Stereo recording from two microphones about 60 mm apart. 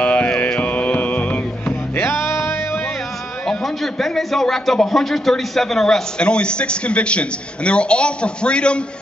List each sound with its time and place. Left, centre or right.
0.0 s mantra: left
3.4 s a man's voice: centre